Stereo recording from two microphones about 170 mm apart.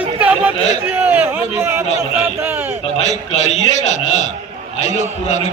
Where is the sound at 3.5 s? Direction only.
45° left (ahead or behind).